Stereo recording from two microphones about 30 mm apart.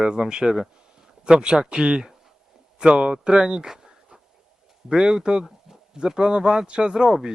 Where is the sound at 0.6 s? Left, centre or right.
Right.